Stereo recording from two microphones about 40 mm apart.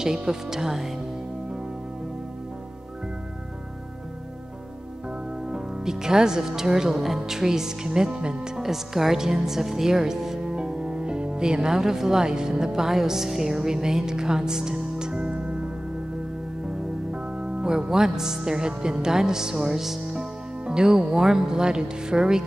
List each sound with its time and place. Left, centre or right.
0.0 s speech: centre
5.4 s speech: centre
8.5 s speech: centre; by 15.7 s right
16.6 s music: right
20.1 s speech: centre